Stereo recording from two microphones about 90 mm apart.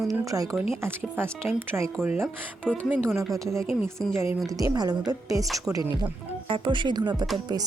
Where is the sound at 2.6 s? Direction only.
15° right (ahead or behind).